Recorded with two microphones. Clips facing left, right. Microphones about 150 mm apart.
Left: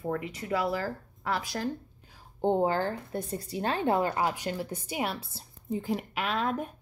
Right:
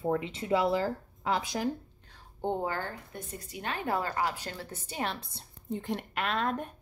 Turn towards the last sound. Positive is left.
turn(degrees=0)  # may be behind; listen again after turning